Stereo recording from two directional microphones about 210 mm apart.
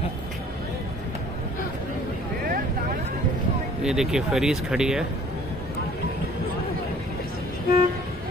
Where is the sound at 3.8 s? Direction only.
5° right (ahead or behind).